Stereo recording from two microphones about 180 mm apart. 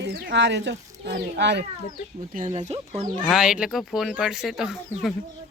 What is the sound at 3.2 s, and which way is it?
Speech, centre (ahead or behind).